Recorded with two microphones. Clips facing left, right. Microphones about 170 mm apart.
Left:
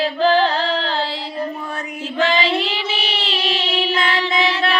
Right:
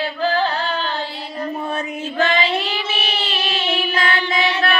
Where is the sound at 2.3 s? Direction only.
90° left.